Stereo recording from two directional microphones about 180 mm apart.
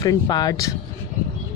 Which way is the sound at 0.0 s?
20° left (ahead or behind).